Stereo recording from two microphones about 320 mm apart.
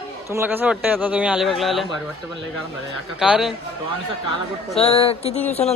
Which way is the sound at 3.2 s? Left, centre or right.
Centre.